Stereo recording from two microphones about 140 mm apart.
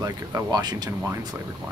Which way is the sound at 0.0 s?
30° right (ahead or behind).